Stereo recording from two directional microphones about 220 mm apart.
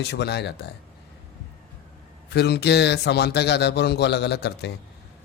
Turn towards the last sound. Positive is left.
turn(degrees=50)  # may be behind; listen again after turning